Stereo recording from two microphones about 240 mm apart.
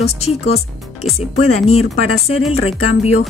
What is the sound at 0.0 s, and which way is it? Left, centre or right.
A woman's voice, left.